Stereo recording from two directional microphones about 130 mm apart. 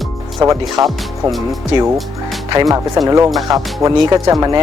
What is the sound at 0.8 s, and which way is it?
Speech, centre (ahead or behind).